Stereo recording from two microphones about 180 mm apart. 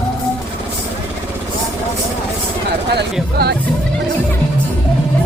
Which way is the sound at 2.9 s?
65° right (ahead or behind).